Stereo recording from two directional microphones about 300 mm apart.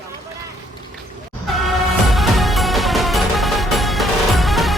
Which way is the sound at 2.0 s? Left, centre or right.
Centre.